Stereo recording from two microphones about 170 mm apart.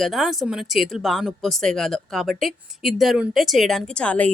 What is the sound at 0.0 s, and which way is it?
Speech, centre (ahead or behind).